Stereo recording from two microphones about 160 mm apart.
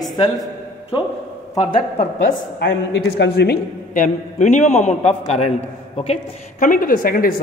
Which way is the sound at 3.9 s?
50° left (ahead or behind).